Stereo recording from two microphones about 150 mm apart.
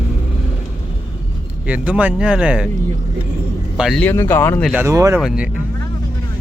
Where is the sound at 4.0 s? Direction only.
15° left (ahead or behind).